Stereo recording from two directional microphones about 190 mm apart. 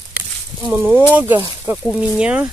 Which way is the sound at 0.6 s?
5° right (ahead or behind).